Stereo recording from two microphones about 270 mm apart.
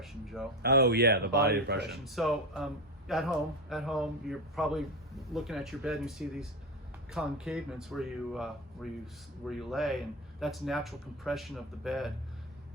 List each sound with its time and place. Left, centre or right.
0.0 s speech: centre
0.6 s a man's voice: right
2.0 s speech: centre